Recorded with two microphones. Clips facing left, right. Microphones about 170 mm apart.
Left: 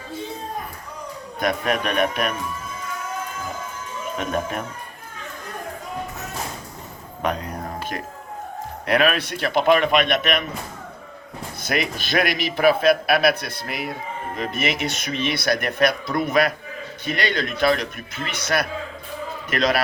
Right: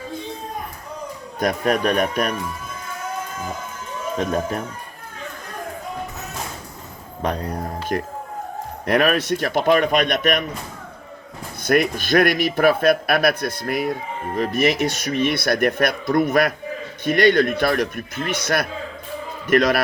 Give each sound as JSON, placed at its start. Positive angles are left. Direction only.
{"t": 1.4, "sound": "speech", "side_deg": -40}
{"t": 7.2, "sound": "speech", "side_deg": -35}
{"t": 8.9, "sound": "a man's voice", "side_deg": -45}
{"t": 11.6, "sound": "a man's voice", "side_deg": -50}